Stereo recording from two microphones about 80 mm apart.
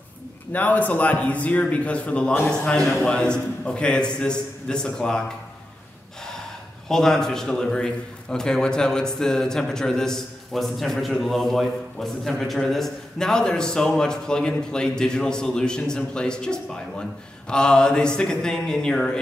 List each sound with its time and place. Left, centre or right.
0.5 s a man's voice: centre
6.9 s a man's voice: centre